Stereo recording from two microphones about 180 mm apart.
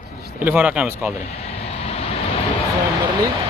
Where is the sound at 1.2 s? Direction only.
35° left (ahead or behind).